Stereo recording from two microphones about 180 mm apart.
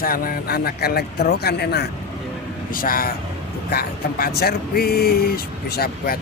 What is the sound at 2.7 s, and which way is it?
Speech, 50° left (ahead or behind).